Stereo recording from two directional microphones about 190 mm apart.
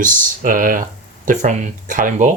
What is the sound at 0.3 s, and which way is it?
Speech, 45° right (ahead or behind).